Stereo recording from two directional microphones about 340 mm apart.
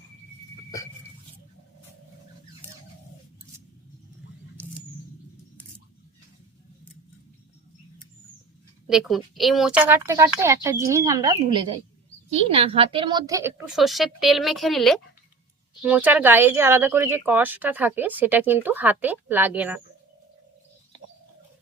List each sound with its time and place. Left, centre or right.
8.9 s speech: centre